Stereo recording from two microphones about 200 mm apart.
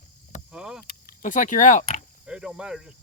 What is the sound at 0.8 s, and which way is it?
Vehicle, 50° left (ahead or behind).